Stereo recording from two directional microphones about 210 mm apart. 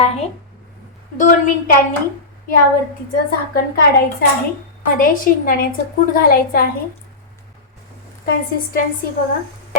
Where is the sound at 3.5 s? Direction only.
50° left (ahead or behind).